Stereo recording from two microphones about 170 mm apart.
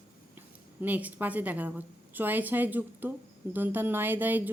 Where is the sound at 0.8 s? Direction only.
10° right (ahead or behind).